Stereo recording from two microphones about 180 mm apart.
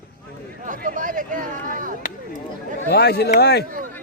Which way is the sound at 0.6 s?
45° right (ahead or behind).